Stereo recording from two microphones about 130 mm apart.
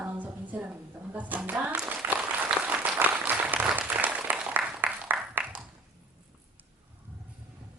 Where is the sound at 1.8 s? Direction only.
15° right (ahead or behind).